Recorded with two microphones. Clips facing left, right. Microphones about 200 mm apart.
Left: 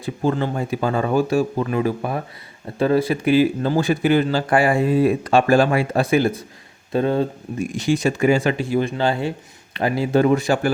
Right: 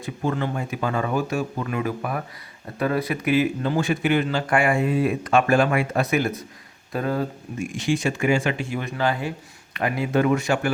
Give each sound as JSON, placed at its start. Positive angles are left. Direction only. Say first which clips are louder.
{"t": 0.0, "sound": "speech", "louder": "left 4 dB", "side_deg": 30}
{"t": 7.7, "sound": "speech", "louder": "left 4 dB", "side_deg": 40}